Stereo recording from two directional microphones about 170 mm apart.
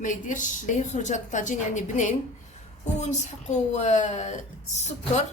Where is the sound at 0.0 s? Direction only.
50° left (ahead or behind).